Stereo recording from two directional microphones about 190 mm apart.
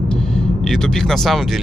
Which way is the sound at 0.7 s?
Centre (ahead or behind).